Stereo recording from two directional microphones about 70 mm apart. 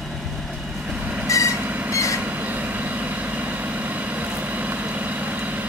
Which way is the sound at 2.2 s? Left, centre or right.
Right.